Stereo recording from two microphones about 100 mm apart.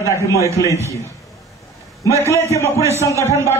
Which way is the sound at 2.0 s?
30° left (ahead or behind).